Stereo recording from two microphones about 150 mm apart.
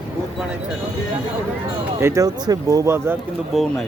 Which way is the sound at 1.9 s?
20° right (ahead or behind).